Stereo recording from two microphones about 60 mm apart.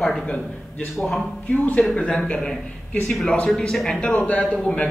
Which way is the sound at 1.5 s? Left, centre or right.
Left.